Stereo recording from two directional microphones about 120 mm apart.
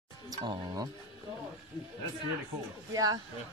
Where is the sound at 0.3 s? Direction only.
35° right (ahead or behind).